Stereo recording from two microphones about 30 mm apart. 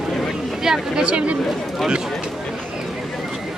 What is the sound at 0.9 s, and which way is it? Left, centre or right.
Speech, right.